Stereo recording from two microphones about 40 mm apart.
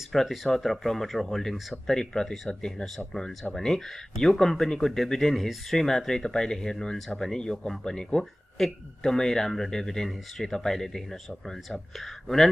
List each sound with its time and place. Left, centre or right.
0.1 s speech: centre
8.5 s speech: centre